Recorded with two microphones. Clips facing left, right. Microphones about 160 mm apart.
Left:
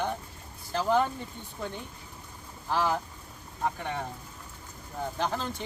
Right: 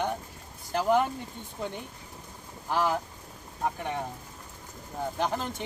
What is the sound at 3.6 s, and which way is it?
Speech, 15° right (ahead or behind).